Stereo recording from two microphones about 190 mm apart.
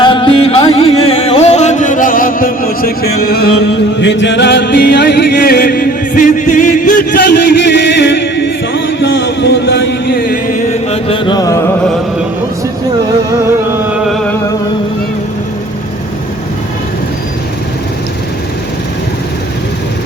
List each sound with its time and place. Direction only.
0.0 s music: 25° left (ahead or behind); by 3.5 s 55° left (ahead or behind)
4.0 s music: 70° left (ahead or behind); by 11.8 s 15° left (ahead or behind)